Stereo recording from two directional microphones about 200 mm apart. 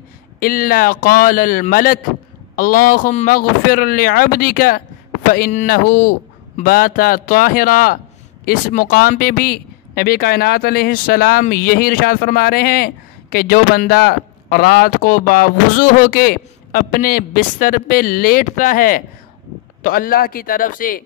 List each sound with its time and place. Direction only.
0.4 s speech: 45° left (ahead or behind)